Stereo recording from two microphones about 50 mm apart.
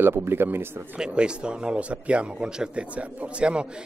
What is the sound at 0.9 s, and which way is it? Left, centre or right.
A man's voice, centre.